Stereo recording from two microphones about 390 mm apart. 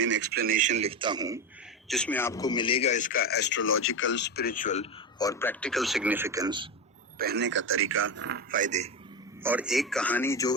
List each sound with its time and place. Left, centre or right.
0.0 s a man's voice: right; by 1.4 s centre
1.9 s a man's voice: centre
7.2 s a man's voice: right
9.4 s a man's voice: centre